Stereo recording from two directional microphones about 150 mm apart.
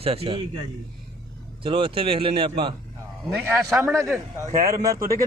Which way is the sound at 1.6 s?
35° right (ahead or behind).